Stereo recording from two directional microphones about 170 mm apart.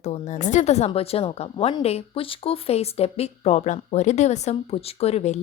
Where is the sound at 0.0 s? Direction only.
40° left (ahead or behind).